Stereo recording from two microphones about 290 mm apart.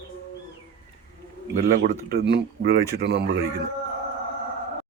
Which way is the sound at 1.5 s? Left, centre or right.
Right.